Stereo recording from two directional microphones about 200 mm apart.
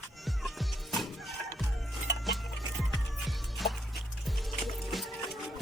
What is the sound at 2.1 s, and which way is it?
Music, 60° left (ahead or behind).